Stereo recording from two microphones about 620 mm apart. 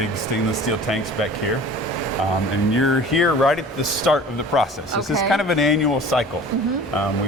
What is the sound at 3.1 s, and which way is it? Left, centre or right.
Speech, centre.